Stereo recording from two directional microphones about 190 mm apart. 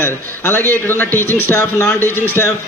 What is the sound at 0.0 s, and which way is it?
A man's voice, 10° left (ahead or behind).